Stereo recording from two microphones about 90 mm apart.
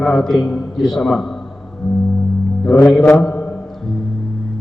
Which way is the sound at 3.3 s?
30° left (ahead or behind).